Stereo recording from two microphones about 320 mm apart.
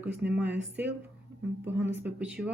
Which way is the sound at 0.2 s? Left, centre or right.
Centre.